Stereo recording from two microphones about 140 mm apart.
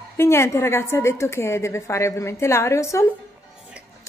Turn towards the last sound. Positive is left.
turn(degrees=20)  # may be behind; listen again after turning